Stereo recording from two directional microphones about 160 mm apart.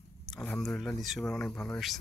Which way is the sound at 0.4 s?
5° left (ahead or behind).